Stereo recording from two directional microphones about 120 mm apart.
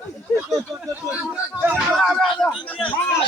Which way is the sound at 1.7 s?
Centre (ahead or behind).